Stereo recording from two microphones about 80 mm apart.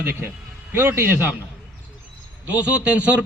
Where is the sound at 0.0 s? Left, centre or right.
Right.